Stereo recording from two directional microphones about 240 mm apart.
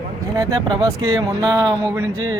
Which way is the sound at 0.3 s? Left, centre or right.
Centre.